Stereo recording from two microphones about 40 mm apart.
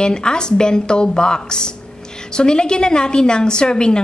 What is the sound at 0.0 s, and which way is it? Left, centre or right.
A woman's voice, left.